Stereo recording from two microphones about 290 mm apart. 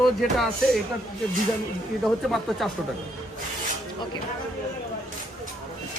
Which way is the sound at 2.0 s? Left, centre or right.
Centre.